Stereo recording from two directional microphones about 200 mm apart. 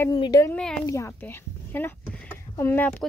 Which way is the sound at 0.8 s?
15° left (ahead or behind).